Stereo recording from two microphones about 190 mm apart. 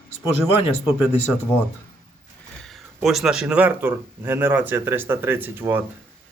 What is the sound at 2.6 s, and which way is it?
Speech, centre (ahead or behind).